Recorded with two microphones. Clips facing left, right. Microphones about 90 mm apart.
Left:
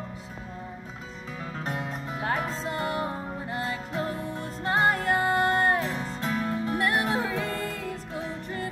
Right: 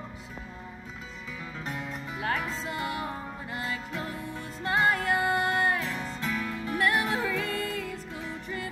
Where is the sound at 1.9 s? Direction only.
40° left (ahead or behind).